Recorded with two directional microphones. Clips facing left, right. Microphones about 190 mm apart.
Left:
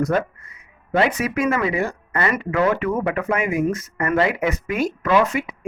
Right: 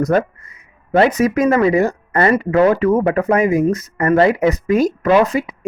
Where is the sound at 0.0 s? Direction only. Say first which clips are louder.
Right 5 dB; 40° right (ahead or behind).